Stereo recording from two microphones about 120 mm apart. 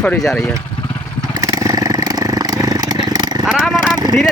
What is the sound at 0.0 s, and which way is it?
Speech, 5° left (ahead or behind).